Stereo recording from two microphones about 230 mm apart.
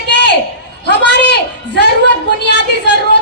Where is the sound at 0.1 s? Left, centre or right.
Left.